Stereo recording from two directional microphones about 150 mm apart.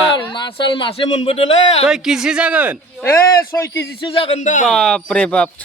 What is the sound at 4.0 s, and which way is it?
Speech, 40° left (ahead or behind).